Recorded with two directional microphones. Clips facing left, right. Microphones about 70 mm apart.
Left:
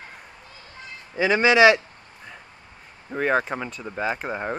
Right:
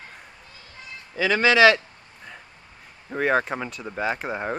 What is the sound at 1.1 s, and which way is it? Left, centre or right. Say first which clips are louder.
Speech: left 1 dB; left.